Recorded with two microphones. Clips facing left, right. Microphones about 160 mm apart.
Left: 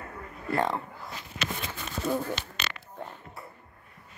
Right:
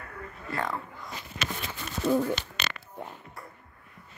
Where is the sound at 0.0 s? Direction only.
25° left (ahead or behind).